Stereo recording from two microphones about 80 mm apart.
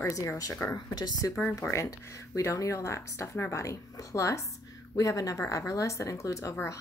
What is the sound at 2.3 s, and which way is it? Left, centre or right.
A woman's voice, left.